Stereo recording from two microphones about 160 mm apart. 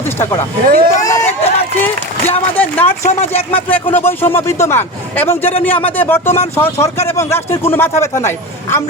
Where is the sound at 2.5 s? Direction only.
10° left (ahead or behind).